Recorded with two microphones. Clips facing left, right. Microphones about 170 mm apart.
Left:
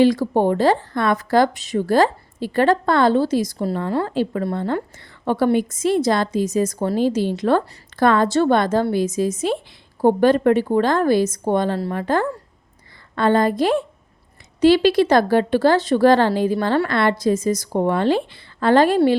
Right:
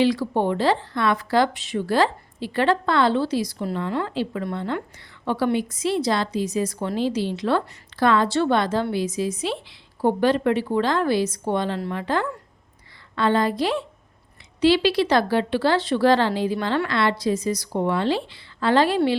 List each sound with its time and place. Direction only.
0.0 s a woman's voice: 45° left (ahead or behind)